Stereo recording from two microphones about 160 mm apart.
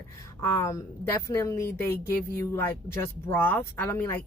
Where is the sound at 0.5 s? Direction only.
15° left (ahead or behind).